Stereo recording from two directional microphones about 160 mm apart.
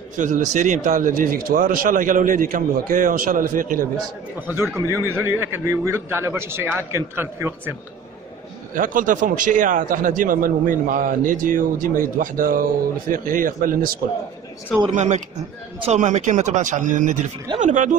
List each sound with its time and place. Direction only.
0.2 s a man's voice: 50° right (ahead or behind)
4.7 s a man's voice: 15° right (ahead or behind)
8.7 s a man's voice: 55° right (ahead or behind)
15.0 s speech: 50° right (ahead or behind)